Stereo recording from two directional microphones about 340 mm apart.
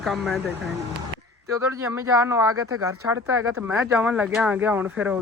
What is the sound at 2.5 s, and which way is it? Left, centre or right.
Speech, right.